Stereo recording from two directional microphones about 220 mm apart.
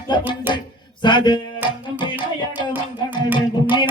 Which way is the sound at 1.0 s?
20° left (ahead or behind).